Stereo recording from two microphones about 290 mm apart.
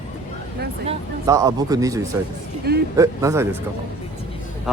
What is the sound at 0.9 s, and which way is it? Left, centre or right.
Speech, centre.